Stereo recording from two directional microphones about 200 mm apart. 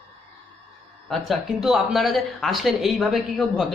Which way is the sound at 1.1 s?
Centre (ahead or behind).